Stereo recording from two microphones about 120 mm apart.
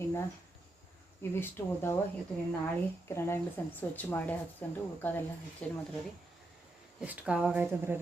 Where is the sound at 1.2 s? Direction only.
20° left (ahead or behind).